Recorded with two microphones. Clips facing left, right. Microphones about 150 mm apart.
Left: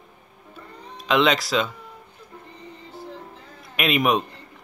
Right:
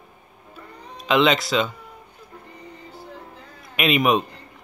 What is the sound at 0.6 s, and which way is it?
Music, centre (ahead or behind).